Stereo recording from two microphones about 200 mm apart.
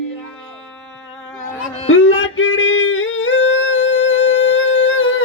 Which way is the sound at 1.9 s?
80° left.